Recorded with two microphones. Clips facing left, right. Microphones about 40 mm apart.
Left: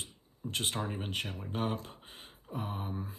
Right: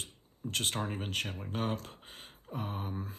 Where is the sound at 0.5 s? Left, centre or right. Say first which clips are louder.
Right 1 dB; centre.